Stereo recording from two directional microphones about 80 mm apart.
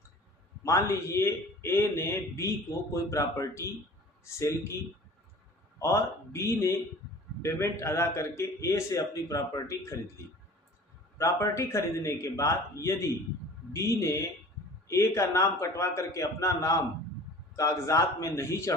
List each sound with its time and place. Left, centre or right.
0.6 s a man's voice: left
5.8 s a man's voice: left
11.2 s a man's voice: left